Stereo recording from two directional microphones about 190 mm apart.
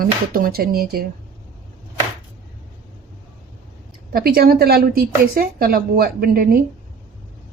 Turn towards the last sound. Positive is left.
turn(degrees=-50)  # may be behind; listen again after turning